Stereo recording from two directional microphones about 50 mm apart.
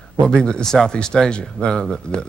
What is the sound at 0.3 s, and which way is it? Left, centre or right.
Speech, centre.